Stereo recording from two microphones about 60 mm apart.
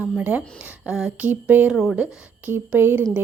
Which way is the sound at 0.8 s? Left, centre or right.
Centre.